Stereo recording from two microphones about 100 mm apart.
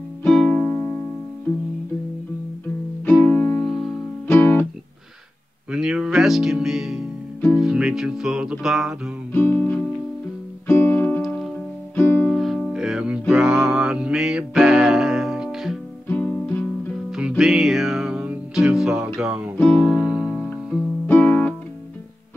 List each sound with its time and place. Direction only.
0.2 s music: 5° left (ahead or behind)
3.1 s music: 15° left (ahead or behind)
5.7 s music: 5° right (ahead or behind)
9.3 s music: 20° left (ahead or behind)
11.2 s music: centre (ahead or behind)
11.9 s music: 20° left (ahead or behind)
12.3 s music: centre (ahead or behind)
16.1 s music: 15° left (ahead or behind)
17.4 s music: 5° right (ahead or behind)
21.1 s music: 15° left (ahead or behind)